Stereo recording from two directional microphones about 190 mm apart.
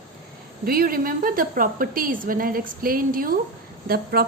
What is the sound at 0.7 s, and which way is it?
A woman's voice, 50° right (ahead or behind).